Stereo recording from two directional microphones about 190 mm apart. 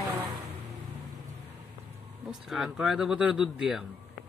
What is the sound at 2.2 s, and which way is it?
Speech, centre (ahead or behind).